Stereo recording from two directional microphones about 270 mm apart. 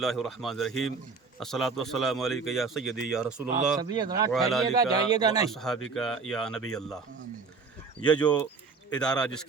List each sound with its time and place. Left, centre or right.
0.0 s a man's voice: centre
0.7 s a man's voice: left
1.4 s a man's voice: centre
3.9 s a man's voice: centre
4.3 s a man's voice: centre
4.8 s a man's voice: centre
5.5 s a man's voice: centre
8.0 s a man's voice: centre